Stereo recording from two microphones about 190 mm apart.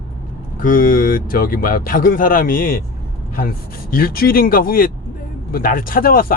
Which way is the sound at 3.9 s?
50° left (ahead or behind).